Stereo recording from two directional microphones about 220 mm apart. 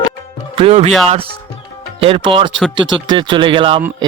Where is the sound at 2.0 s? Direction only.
25° right (ahead or behind).